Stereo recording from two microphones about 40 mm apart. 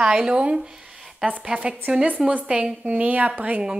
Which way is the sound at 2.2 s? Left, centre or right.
Centre.